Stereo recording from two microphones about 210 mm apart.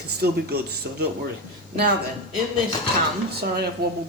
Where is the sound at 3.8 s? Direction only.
50° right (ahead or behind).